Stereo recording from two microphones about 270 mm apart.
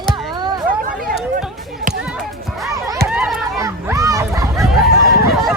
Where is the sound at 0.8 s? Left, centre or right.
Right.